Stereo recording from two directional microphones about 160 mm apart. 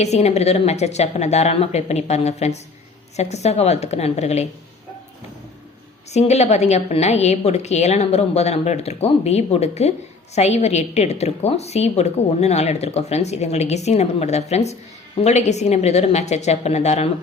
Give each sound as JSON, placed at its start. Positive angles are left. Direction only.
{"t": 0.0, "sound": "a woman's voice", "side_deg": 45}
{"t": 6.1, "sound": "a woman's voice", "side_deg": 45}